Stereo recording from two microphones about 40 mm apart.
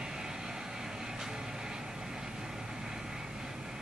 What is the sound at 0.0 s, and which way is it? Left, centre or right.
Vehicle, centre.